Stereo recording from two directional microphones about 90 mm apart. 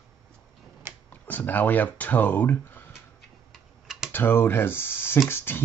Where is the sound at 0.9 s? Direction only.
30° right (ahead or behind).